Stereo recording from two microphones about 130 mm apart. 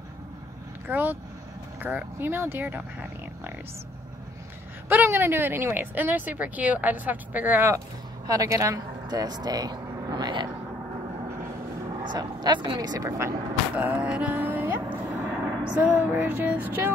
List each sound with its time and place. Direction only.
0.8 s speech: 15° right (ahead or behind)
4.8 s speech: 15° right (ahead or behind)
8.3 s speech: 25° right (ahead or behind)
12.1 s speech: 35° right (ahead or behind)
13.7 s a sound: 10° right (ahead or behind)